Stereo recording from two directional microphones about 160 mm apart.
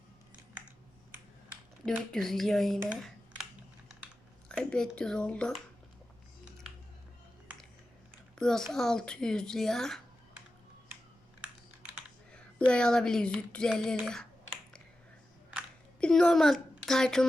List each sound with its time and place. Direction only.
1.8 s speech: centre (ahead or behind)
4.4 s speech: 5° left (ahead or behind)
8.4 s speech: 5° left (ahead or behind)
12.3 s speech: 5° left (ahead or behind)
16.0 s a woman's voice: 5° left (ahead or behind)